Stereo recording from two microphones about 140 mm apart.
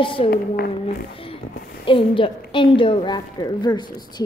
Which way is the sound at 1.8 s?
40° left (ahead or behind).